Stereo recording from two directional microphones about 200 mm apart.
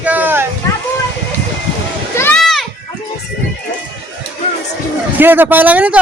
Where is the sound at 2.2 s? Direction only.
5° left (ahead or behind).